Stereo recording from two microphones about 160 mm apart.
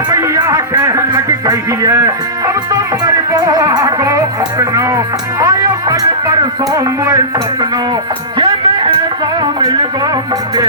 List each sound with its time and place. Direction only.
0.1 s music: 20° right (ahead or behind)
8.4 s music: 30° right (ahead or behind)